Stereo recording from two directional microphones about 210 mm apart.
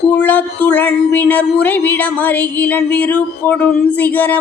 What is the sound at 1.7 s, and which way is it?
Speech, 50° left (ahead or behind).